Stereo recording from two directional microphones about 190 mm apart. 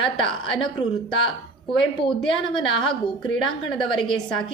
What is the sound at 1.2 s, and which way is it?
Speech, 25° left (ahead or behind).